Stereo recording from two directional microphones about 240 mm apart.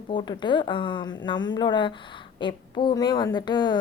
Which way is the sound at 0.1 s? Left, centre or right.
Centre.